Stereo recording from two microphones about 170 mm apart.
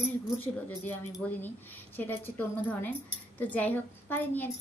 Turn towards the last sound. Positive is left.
turn(degrees=10)  # may be behind; listen again after turning